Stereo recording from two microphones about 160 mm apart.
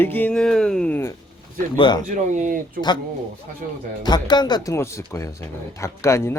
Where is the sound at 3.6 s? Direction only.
60° right (ahead or behind).